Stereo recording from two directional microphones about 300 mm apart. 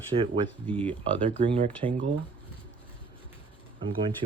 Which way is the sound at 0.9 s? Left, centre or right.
Centre.